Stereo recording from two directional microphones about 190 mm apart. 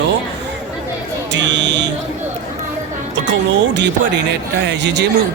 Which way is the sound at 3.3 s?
65° right (ahead or behind).